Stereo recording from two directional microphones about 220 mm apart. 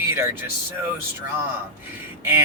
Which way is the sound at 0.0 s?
10° right (ahead or behind).